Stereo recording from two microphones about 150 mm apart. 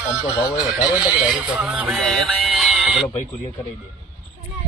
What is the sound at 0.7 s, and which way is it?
Speech, 5° right (ahead or behind).